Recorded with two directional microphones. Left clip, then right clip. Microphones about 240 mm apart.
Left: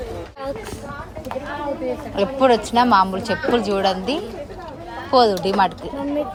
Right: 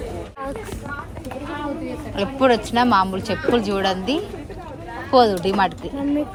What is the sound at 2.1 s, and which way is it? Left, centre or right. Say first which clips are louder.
Speech: left 1 dB; centre.